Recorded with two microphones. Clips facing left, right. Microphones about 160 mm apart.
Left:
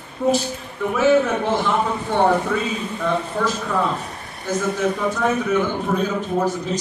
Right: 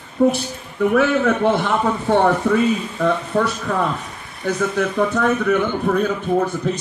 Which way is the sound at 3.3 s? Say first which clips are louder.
Right 2 dB; 60° right (ahead or behind).